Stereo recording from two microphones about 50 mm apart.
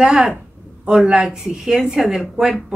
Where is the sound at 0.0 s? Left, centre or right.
Centre.